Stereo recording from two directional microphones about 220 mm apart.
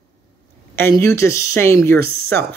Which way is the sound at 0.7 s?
10° left (ahead or behind).